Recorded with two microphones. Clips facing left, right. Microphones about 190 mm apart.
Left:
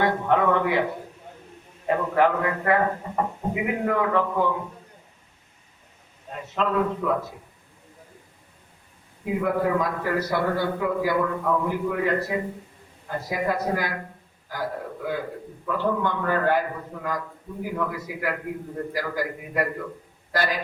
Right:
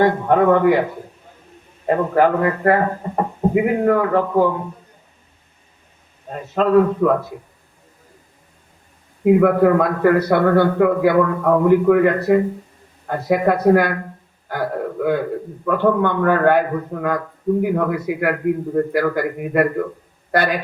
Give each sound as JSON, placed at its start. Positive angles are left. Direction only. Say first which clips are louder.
{"t": 0.0, "sound": "speech", "louder": "right 7 dB", "side_deg": -45}
{"t": 1.9, "sound": "speech", "louder": "right 5 dB", "side_deg": -40}
{"t": 6.3, "sound": "speech", "louder": "right 10 dB", "side_deg": -45}
{"t": 9.2, "sound": "a man's voice", "louder": "right 11 dB", "side_deg": -60}
{"t": 14.4, "sound": "a sound", "louder": "right 8 dB", "side_deg": -60}
{"t": 15.6, "sound": "a man's voice", "louder": "right 8 dB", "side_deg": -60}